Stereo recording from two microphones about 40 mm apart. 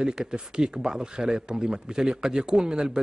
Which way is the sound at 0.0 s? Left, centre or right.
Centre.